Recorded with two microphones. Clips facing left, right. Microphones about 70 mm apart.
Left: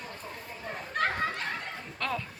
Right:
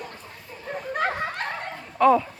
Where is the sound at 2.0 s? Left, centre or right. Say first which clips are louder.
Right 17 dB; centre.